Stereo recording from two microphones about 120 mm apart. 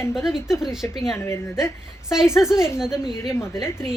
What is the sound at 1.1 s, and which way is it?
Speech, 20° left (ahead or behind).